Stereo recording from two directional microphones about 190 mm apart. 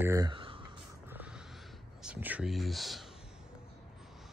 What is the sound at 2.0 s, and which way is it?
Speech, 5° right (ahead or behind).